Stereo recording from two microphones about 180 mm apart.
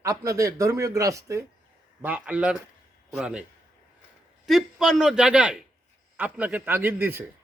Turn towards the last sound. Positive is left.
turn(degrees=-10)  # may be behind; listen again after turning